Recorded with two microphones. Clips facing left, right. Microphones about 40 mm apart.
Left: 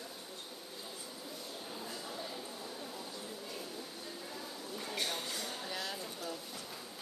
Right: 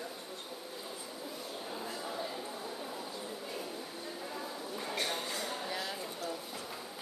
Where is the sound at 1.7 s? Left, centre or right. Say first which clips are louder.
Right 5 dB; centre.